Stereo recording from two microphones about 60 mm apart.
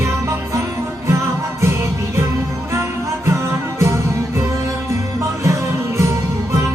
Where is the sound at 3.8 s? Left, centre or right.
Right.